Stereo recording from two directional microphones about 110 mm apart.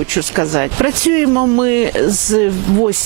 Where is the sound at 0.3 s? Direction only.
15° right (ahead or behind).